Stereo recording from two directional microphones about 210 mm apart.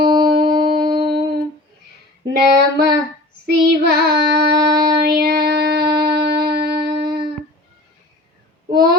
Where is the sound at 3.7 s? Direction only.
50° right (ahead or behind).